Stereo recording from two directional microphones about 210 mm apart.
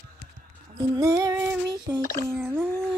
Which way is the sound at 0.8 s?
15° right (ahead or behind).